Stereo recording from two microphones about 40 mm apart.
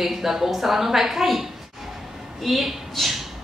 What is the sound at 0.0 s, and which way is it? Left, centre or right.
A woman's voice, centre.